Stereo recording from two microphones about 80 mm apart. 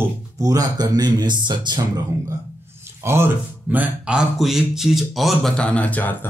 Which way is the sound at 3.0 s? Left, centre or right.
Right.